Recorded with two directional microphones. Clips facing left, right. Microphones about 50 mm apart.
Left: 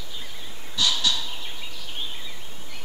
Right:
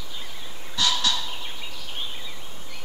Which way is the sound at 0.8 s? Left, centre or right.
Right.